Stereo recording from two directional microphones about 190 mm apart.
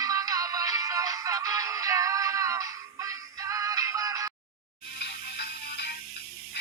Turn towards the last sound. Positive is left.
turn(degrees=55)  # may be behind; listen again after turning